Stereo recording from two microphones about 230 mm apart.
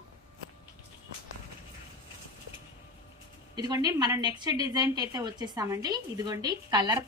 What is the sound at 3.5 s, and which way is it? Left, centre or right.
A woman's voice, centre.